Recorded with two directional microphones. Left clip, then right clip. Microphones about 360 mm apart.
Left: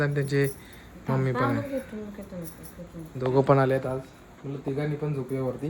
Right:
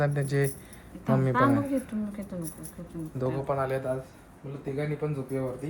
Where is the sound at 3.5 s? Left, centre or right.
Left.